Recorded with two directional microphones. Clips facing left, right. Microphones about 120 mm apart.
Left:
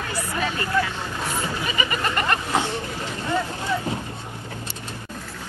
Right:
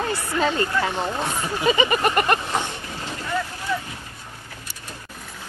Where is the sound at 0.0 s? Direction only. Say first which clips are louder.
Right 4 dB; 30° right (ahead or behind).